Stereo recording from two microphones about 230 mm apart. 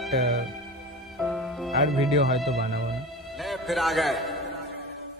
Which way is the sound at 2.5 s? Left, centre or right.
Right.